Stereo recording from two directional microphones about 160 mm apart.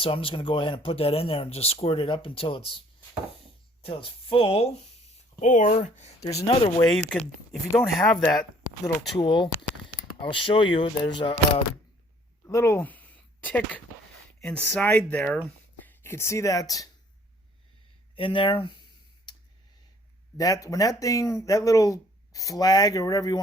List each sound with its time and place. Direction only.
0.0 s speech: 35° left (ahead or behind)
3.8 s speech: 35° left (ahead or behind)
5.4 s speech: 50° left (ahead or behind)
6.9 s speech: 5° left (ahead or behind)
8.3 s speech: 25° left (ahead or behind)
12.5 s speech: 20° left (ahead or behind)
18.2 s speech: 30° left (ahead or behind)
20.4 s speech: 20° left (ahead or behind)